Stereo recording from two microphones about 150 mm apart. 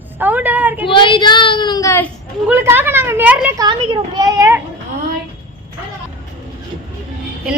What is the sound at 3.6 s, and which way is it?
A child's voice, 30° right (ahead or behind).